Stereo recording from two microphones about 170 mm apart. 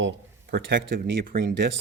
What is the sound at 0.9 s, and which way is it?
Speech, 55° right (ahead or behind).